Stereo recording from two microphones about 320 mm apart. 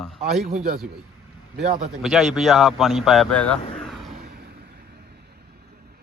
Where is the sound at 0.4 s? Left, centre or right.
Right.